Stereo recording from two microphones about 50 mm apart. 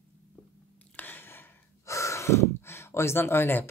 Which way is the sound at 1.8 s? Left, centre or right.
Left.